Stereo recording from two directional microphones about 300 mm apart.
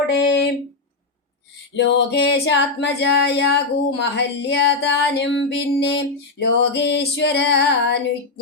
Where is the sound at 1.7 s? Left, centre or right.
Left.